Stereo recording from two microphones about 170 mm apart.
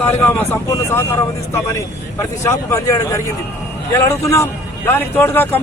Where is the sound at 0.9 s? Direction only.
15° left (ahead or behind).